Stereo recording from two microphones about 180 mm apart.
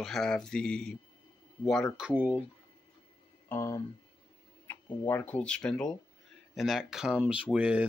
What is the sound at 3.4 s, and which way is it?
Speech, 15° left (ahead or behind).